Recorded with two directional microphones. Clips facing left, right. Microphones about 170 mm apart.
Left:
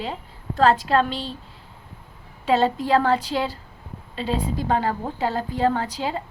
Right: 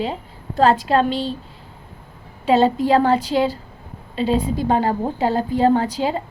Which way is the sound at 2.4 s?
20° right (ahead or behind).